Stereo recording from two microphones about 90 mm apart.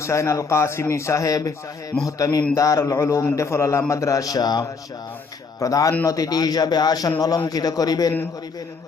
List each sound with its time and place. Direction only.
0.0 s a man's voice: 35° left (ahead or behind)